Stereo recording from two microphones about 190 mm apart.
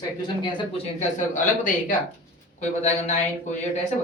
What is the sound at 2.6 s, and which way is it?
Speech, 35° left (ahead or behind).